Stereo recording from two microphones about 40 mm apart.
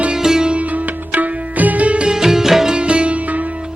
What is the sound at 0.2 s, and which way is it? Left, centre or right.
Sitar, centre.